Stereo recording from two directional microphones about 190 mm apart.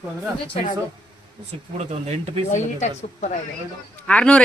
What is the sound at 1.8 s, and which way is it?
Speech, 35° right (ahead or behind).